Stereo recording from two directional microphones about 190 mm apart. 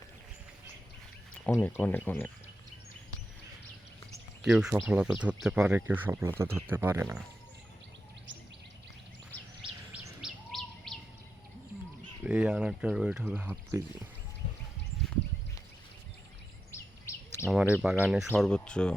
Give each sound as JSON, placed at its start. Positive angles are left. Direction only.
{"t": 1.6, "sound": "speech", "side_deg": 10}
{"t": 4.4, "sound": "speech", "side_deg": -5}
{"t": 9.9, "sound": "bird", "side_deg": -15}
{"t": 10.2, "sound": "bird", "side_deg": 0}
{"t": 12.2, "sound": "speech", "side_deg": -5}
{"t": 16.7, "sound": "bird vocalization", "side_deg": 15}
{"t": 17.4, "sound": "speech", "side_deg": -5}